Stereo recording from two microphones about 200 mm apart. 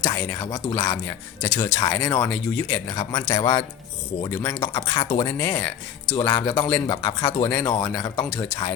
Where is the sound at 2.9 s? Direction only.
20° left (ahead or behind).